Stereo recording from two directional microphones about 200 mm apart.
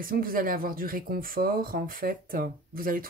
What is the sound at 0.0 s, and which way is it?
Speech, 45° right (ahead or behind).